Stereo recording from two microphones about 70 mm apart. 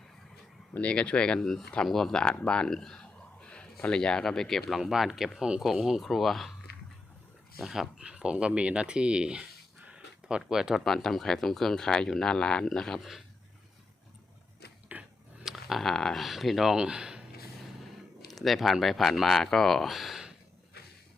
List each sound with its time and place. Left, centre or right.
0.7 s speech: centre
7.6 s speech: centre
14.9 s a sound: right
15.4 s speech: centre
18.3 s speech: centre